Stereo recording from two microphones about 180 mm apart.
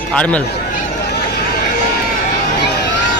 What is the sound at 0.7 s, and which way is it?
Run, 60° left (ahead or behind).